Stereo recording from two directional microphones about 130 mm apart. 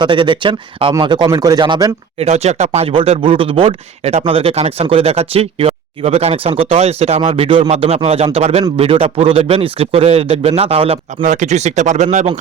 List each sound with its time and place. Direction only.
0.0 s speech: 40° right (ahead or behind)
2.2 s speech: 55° right (ahead or behind)
7.3 s speech: 45° right (ahead or behind)
11.2 s speech: 70° right (ahead or behind)